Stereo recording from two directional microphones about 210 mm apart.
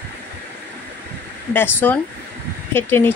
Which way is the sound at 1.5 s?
10° left (ahead or behind).